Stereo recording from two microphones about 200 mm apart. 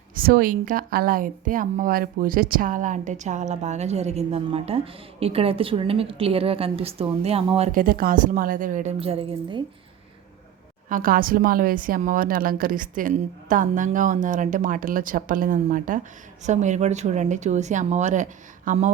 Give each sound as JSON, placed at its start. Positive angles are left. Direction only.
{"t": 0.1, "sound": "a woman's voice", "side_deg": -45}
{"t": 10.8, "sound": "a woman's voice", "side_deg": -45}